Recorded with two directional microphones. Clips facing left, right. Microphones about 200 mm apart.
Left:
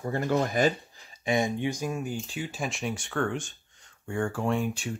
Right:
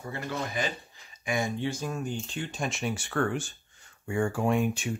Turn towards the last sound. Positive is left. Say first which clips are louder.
# right 2 dB
turn(degrees=-20)  # may be behind; listen again after turning